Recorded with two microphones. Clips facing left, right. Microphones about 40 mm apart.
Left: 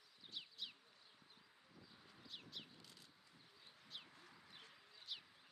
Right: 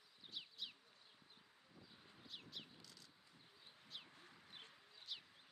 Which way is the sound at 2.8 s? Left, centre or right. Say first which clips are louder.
Even; left.